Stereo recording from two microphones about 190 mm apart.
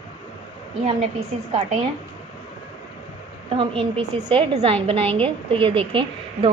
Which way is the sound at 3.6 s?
30° right (ahead or behind).